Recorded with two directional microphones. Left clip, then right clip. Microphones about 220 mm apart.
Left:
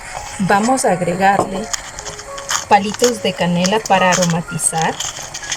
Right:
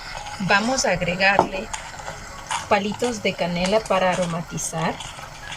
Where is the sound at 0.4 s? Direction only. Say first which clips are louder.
Left 5 dB; 35° left (ahead or behind).